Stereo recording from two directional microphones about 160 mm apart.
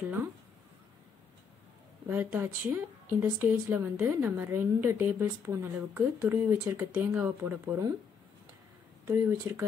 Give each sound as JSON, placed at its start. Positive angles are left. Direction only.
{"t": 2.0, "sound": "speech", "side_deg": -10}
{"t": 9.0, "sound": "speech", "side_deg": -15}